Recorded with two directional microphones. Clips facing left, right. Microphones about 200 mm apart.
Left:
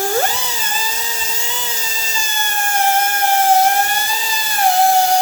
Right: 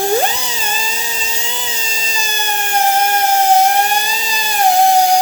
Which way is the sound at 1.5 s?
20° right (ahead or behind).